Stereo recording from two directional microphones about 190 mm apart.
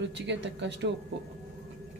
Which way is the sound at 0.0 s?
70° right (ahead or behind).